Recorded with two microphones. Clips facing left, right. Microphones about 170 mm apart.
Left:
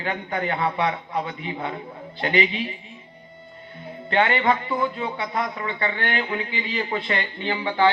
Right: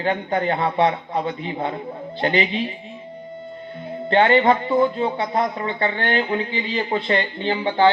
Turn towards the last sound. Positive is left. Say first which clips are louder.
# right 3 dB
turn(degrees=-30)  # may be behind; listen again after turning